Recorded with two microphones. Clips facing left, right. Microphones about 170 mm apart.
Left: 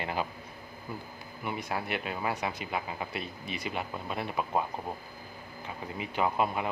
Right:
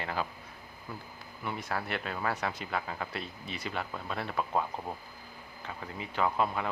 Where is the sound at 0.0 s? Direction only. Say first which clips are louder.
Left 2 dB; 15° left (ahead or behind).